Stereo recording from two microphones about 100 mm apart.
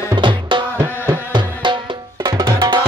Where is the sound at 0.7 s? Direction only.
25° right (ahead or behind).